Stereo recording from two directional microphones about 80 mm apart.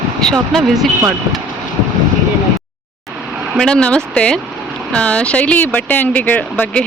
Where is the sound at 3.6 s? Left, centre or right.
Centre.